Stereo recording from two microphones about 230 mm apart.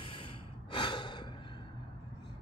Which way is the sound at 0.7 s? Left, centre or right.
Left.